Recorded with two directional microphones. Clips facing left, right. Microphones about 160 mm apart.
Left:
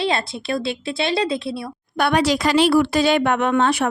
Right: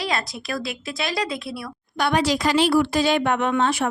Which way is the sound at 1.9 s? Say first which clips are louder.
Left 3 dB; 60° left (ahead or behind).